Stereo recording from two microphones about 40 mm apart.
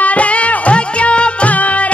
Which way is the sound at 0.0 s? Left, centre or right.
Left.